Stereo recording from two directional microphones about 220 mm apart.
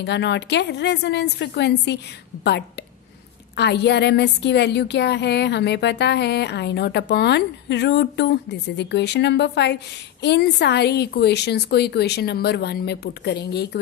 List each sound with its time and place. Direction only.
0.0 s a woman's voice: 50° left (ahead or behind)
3.5 s a woman's voice: 50° left (ahead or behind)